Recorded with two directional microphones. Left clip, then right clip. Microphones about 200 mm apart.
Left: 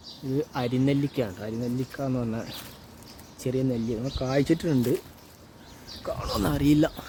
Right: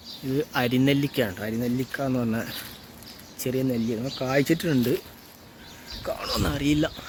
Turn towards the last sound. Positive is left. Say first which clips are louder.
# left 2 dB
turn(degrees=35)  # may be behind; listen again after turning